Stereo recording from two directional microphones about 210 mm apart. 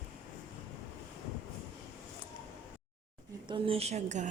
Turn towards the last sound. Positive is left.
turn(degrees=-35)  # may be behind; listen again after turning